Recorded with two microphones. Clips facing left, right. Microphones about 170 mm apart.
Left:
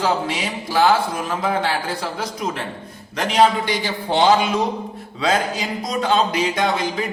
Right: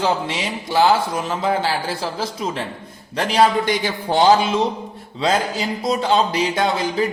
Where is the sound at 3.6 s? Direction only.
45° right (ahead or behind).